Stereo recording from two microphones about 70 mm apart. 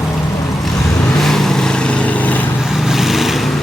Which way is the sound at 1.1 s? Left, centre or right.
Centre.